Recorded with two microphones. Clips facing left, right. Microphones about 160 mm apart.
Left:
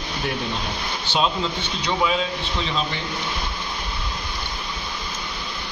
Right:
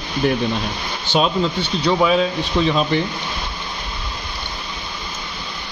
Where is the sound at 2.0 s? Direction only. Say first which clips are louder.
Right 5 dB; 50° right (ahead or behind).